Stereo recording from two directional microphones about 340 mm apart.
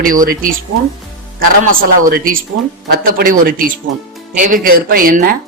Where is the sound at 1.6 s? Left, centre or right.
Right.